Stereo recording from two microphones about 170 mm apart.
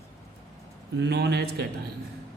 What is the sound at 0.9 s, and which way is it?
Speech, 85° right.